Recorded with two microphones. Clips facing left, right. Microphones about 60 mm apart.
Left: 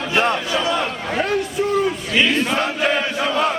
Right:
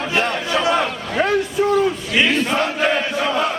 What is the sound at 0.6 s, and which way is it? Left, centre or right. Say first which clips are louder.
Speech: right 5 dB; right.